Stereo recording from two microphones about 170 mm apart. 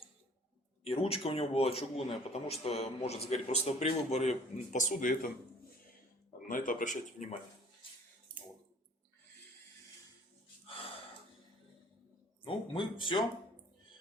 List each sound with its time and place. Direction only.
0.9 s speech: 35° left (ahead or behind); by 5.3 s 50° left (ahead or behind)
6.5 s speech: 55° left (ahead or behind)
10.7 s gasp: 35° left (ahead or behind)
12.5 s speech: 30° left (ahead or behind)